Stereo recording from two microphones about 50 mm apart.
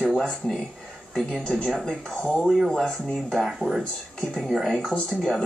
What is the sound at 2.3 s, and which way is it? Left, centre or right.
Speech, centre.